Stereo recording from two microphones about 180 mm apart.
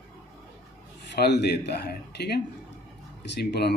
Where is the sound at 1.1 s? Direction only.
70° left (ahead or behind).